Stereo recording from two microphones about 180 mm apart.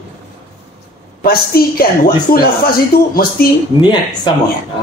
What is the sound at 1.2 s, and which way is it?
A woman's voice, 55° left (ahead or behind).